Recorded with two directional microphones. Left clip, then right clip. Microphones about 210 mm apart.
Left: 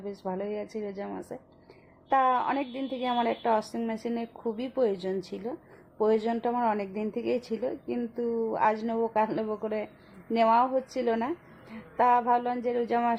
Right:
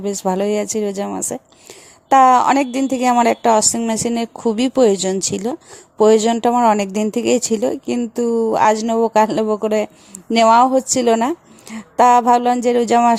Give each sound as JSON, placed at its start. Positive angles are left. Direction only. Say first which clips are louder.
{"t": 0.0, "sound": "a woman's voice", "louder": "right 15 dB", "side_deg": -45}